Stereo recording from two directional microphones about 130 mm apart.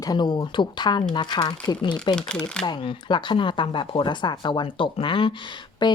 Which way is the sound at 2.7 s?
35° left (ahead or behind).